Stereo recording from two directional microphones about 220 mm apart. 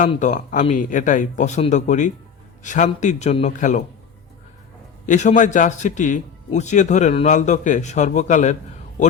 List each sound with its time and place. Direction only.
0.0 s a man's voice: 35° left (ahead or behind)
5.0 s a man's voice: 35° left (ahead or behind)